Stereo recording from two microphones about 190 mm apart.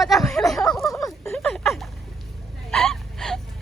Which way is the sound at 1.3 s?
5° left (ahead or behind).